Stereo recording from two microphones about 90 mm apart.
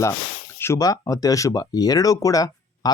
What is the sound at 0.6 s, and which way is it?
Speech, 30° left (ahead or behind).